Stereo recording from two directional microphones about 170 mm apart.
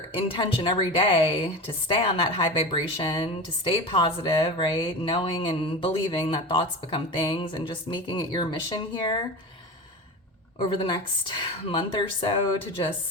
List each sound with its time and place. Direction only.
0.1 s a woman's voice: 30° left (ahead or behind)
10.6 s a woman's voice: 30° left (ahead or behind)